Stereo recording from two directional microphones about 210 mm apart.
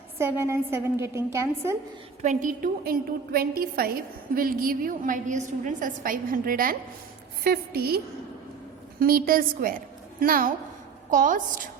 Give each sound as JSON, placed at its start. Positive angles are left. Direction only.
{"t": 0.2, "sound": "a woman's voice", "side_deg": -10}
{"t": 2.2, "sound": "a woman's voice", "side_deg": -35}